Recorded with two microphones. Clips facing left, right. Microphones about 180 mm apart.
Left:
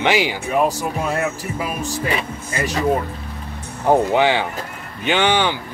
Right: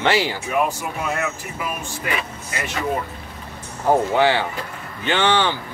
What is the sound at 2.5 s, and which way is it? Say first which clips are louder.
Speech: left 6 dB; 40° left (ahead or behind).